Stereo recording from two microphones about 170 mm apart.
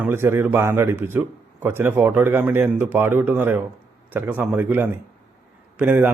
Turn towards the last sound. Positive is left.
turn(degrees=-10)  # may be behind; listen again after turning